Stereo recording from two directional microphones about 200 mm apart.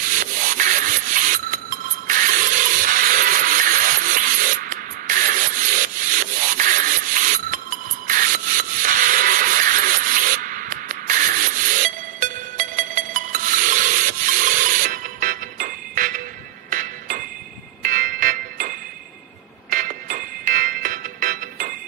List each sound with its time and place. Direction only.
0.1 s rub: 40° right (ahead or behind)
17.8 s music: 40° right (ahead or behind)
19.7 s music: 45° right (ahead or behind)